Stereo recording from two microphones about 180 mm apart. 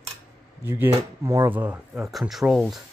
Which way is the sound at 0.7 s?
15° right (ahead or behind).